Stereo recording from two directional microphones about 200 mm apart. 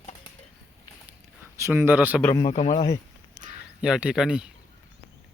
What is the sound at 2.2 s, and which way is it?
Speech, 20° left (ahead or behind).